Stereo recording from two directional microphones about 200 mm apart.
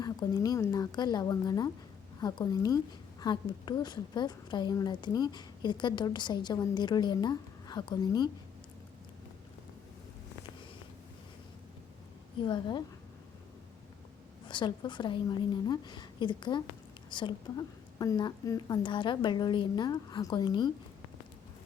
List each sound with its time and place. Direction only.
0.0 s a woman's voice: 20° left (ahead or behind)
12.4 s a woman's voice: 25° left (ahead or behind)
14.4 s a woman's voice: 25° left (ahead or behind)